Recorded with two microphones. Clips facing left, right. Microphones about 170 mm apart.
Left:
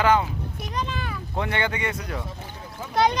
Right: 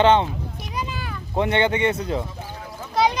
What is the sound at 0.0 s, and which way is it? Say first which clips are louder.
Speech: right 4 dB; 25° right (ahead or behind).